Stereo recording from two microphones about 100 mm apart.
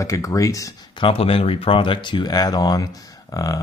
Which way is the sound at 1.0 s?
70° left (ahead or behind).